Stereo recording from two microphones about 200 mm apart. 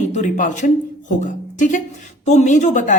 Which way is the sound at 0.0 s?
35° left (ahead or behind).